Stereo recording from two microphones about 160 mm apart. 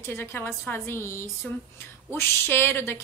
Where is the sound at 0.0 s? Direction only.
15° left (ahead or behind).